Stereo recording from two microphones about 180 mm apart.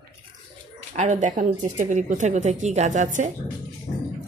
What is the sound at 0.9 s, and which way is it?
A woman's voice, 40° right (ahead or behind).